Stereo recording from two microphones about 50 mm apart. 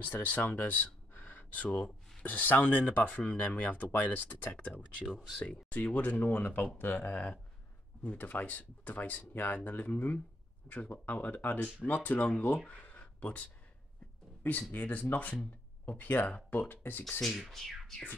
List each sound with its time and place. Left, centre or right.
0.0 s speech: left
4.5 s speech: left
12.6 s a sound: left
14.7 s speech: left
17.2 s speech: centre